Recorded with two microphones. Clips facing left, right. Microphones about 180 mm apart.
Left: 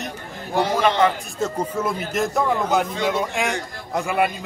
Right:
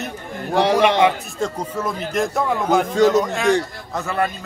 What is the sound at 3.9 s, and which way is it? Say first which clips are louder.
Speech: left 1 dB; 15° left (ahead or behind).